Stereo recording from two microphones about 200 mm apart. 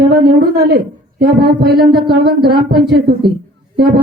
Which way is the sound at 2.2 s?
50° right (ahead or behind).